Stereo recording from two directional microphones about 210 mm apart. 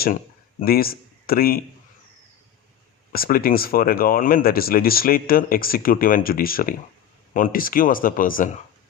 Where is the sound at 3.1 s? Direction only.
45° left (ahead or behind).